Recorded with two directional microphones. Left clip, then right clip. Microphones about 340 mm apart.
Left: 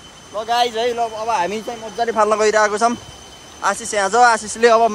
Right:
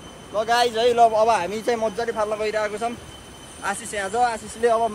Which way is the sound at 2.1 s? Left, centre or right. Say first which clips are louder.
Left 9 dB; left.